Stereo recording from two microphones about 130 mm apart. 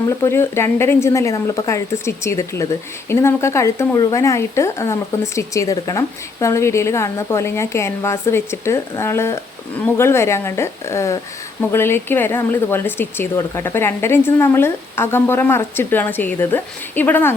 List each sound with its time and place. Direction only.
0.2 s speech: 20° left (ahead or behind)